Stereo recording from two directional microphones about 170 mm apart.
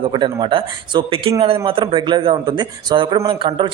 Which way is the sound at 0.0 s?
30° right (ahead or behind).